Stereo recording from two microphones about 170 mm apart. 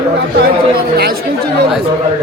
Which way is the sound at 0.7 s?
65° right (ahead or behind).